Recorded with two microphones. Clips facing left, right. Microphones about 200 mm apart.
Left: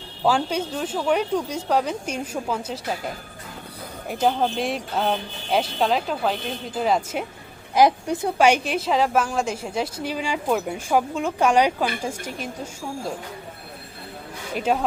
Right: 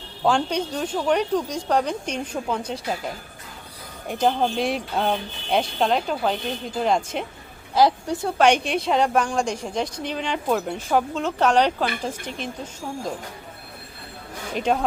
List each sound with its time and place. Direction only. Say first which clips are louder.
0.3 s speech: even; 5° left (ahead or behind)
4.1 s speech: even; 5° left (ahead or behind)
7.8 s a woman's voice: left 1 dB; 20° left (ahead or behind)
8.2 s a woman's voice: even; 10° left (ahead or behind)
14.5 s speech: even; 5° left (ahead or behind)